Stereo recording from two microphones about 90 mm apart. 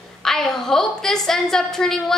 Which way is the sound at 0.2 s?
5° left (ahead or behind).